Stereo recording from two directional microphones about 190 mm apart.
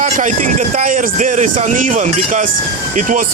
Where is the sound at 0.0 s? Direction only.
40° right (ahead or behind).